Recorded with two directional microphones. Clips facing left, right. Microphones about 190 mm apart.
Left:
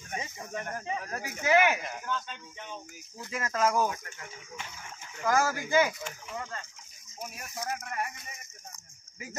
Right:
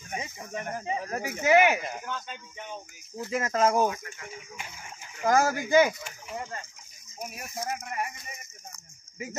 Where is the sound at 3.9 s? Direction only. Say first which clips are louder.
Right 1 dB; 40° left (ahead or behind).